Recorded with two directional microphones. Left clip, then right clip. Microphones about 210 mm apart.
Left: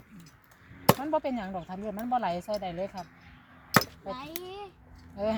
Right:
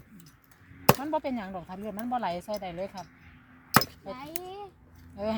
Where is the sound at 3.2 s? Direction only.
50° left (ahead or behind).